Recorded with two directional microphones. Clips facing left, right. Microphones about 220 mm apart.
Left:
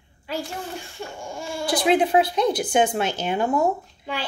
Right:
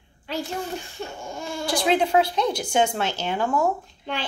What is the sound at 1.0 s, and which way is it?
A child's voice, 10° left (ahead or behind).